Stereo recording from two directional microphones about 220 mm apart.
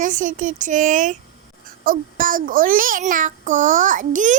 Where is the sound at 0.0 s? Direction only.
35° right (ahead or behind).